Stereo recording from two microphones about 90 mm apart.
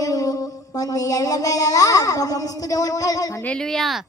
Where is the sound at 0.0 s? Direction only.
40° left (ahead or behind).